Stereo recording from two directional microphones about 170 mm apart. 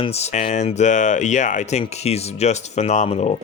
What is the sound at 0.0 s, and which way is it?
Speech, 40° left (ahead or behind).